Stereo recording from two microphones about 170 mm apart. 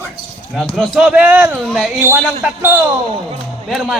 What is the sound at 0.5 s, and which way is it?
A man's voice, centre (ahead or behind).